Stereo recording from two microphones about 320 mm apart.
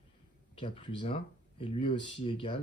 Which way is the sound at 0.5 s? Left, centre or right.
Centre.